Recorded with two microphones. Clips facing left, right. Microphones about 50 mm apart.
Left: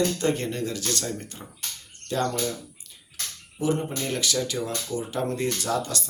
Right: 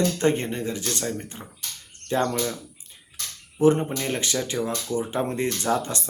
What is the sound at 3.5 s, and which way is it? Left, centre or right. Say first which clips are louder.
Speech: right 6 dB; right.